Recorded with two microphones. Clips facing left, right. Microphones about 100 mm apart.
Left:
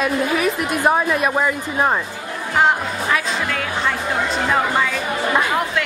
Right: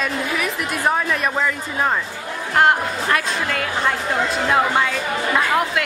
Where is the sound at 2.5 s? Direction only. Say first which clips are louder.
Right 1 dB; centre (ahead or behind).